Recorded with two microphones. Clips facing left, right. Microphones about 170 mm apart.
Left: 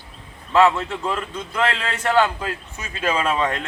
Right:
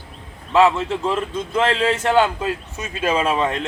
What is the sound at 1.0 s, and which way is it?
A man's voice, 20° right (ahead or behind).